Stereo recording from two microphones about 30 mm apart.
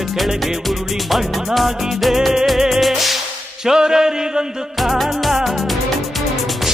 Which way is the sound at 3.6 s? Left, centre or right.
Right.